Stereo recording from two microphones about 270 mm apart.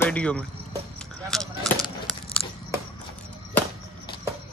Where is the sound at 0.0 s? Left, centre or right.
Centre.